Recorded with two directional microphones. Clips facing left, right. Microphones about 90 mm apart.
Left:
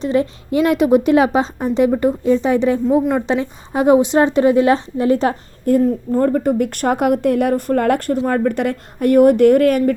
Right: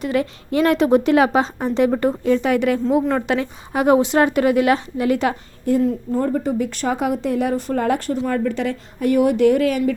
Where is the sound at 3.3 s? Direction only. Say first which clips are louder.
Left 2 dB; 25° left (ahead or behind).